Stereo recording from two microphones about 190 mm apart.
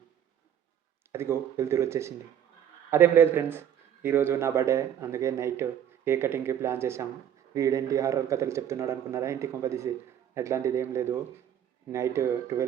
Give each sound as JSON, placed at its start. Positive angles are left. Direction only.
{"t": 1.1, "sound": "a man's voice", "side_deg": -15}